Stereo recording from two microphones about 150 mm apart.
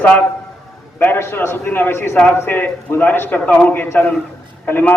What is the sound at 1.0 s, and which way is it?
A man's voice, 15° left (ahead or behind).